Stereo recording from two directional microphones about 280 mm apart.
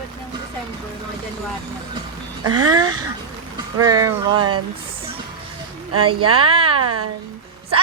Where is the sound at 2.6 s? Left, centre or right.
Centre.